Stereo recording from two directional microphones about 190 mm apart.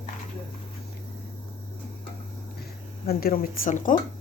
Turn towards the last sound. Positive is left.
turn(degrees=45)  # may be behind; listen again after turning